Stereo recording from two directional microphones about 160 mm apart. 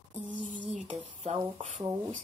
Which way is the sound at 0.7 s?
45° right (ahead or behind).